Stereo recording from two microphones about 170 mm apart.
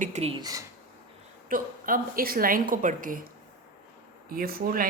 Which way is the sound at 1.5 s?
55° right (ahead or behind).